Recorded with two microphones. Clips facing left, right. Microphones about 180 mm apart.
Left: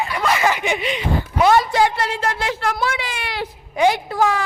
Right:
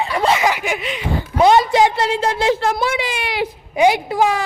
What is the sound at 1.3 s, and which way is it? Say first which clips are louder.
A woman's voice: right 3 dB; 25° right (ahead or behind).